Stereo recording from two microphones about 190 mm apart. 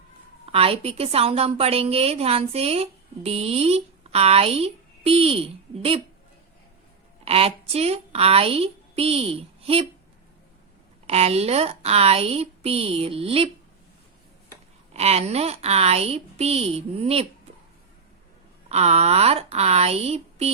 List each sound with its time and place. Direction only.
0.4 s a woman's voice: 30° right (ahead or behind)
7.3 s a woman's voice: 30° right (ahead or behind)
11.0 s a woman's voice: 35° right (ahead or behind)
14.9 s a woman's voice: 35° right (ahead or behind)
18.7 s a woman's voice: 35° right (ahead or behind)